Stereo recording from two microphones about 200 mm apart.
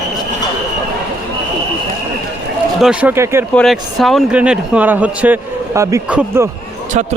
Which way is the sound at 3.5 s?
Centre (ahead or behind).